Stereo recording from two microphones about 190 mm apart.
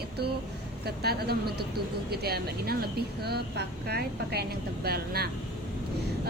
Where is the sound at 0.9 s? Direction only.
55° right (ahead or behind).